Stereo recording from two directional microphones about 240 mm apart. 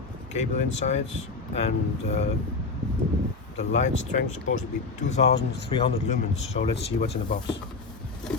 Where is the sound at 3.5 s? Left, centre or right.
Left.